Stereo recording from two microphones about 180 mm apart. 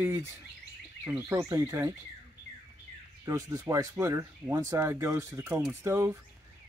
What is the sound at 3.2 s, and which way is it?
Speech, 15° right (ahead or behind).